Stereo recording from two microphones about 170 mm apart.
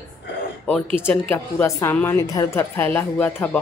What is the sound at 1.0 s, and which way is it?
A woman's voice, 10° left (ahead or behind).